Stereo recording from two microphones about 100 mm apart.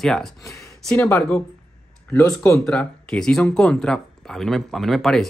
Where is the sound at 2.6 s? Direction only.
5° left (ahead or behind).